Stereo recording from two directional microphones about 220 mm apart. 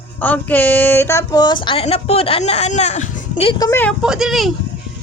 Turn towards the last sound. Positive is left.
turn(degrees=0)  # may be behind; listen again after turning